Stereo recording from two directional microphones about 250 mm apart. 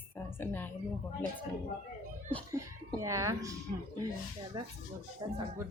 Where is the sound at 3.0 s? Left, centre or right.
Centre.